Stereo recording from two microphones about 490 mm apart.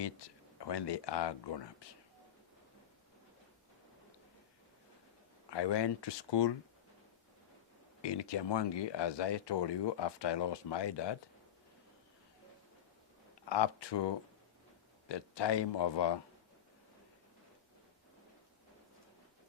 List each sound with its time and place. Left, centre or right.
0.6 s speech: left
5.5 s speech: left
8.0 s speech: left
13.5 s speech: left
15.1 s speech: left